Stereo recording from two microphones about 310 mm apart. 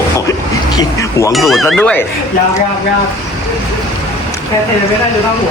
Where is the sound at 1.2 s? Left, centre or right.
Centre.